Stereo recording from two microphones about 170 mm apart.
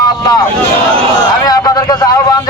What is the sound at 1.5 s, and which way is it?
Speech, 20° left (ahead or behind).